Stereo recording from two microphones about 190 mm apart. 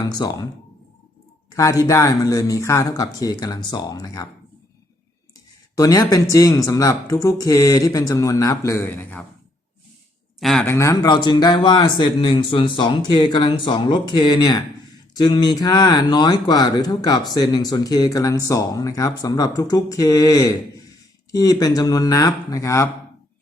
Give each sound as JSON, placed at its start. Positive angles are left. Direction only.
{"t": 0.0, "sound": "speech", "side_deg": 20}
{"t": 1.5, "sound": "a sound", "side_deg": 15}
{"t": 1.8, "sound": "speech", "side_deg": 15}
{"t": 5.7, "sound": "speech", "side_deg": 20}
{"t": 10.4, "sound": "speech", "side_deg": 5}